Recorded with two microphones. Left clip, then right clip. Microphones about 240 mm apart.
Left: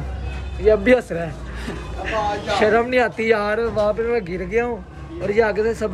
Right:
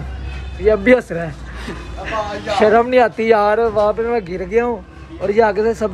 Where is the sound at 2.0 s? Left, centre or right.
Centre.